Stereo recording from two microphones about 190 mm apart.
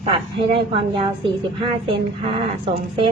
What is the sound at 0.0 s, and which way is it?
A woman's voice, 30° right (ahead or behind).